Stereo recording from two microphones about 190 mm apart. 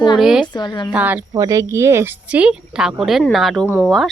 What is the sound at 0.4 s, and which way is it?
Speech, 25° left (ahead or behind).